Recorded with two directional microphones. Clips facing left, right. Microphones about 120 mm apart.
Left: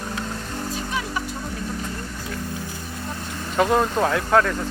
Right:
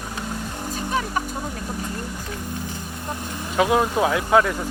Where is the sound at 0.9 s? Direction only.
45° right (ahead or behind).